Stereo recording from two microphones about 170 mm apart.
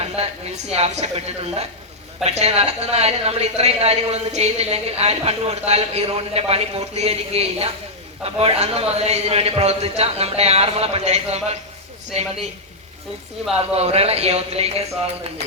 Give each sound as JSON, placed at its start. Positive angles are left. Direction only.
{"t": 0.0, "sound": "a woman's voice", "side_deg": -40}
{"t": 13.7, "sound": "a woman's voice", "side_deg": -40}